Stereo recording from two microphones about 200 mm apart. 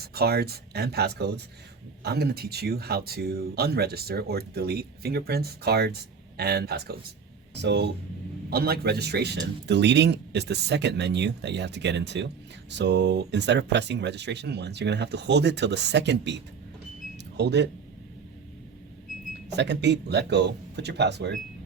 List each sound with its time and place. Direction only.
0.0 s speech: 50° right (ahead or behind)
19.5 s speech: 60° right (ahead or behind)